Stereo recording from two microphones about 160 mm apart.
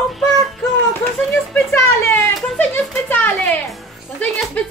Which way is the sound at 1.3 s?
5° left (ahead or behind).